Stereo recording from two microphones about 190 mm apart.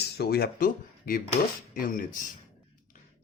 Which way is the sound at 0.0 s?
55° left (ahead or behind).